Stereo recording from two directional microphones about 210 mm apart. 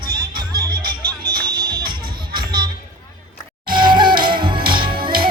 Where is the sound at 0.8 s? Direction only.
45° right (ahead or behind).